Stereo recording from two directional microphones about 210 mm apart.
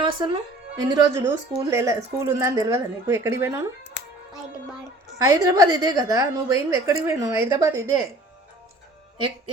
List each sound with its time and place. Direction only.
0.0 s a woman's voice: 20° right (ahead or behind)
4.0 s hands: 55° left (ahead or behind)
5.1 s a woman's voice: 15° right (ahead or behind)